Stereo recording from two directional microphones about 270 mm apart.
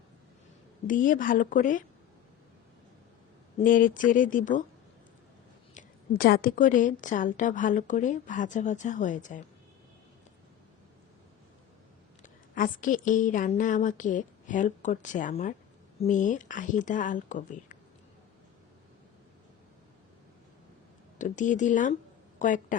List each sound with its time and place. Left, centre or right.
0.9 s a woman's voice: left
3.6 s a woman's voice: left
5.7 s a woman's voice: left
12.2 s a woman's voice: left
21.2 s a woman's voice: left